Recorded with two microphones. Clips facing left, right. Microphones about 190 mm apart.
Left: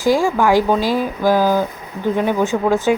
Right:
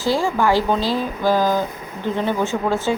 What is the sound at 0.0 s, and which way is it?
Speech, 15° left (ahead or behind).